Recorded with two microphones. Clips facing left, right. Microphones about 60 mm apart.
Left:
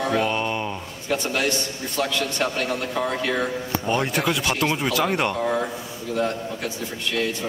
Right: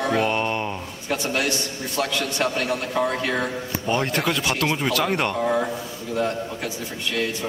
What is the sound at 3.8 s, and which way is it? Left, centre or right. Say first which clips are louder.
Speech: right 1 dB; centre.